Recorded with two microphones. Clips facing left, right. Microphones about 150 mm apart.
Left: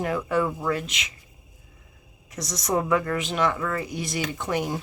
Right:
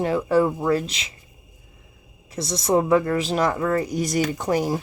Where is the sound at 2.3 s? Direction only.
30° right (ahead or behind).